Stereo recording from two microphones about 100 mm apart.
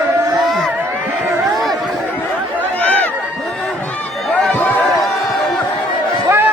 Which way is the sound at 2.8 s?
15° left (ahead or behind).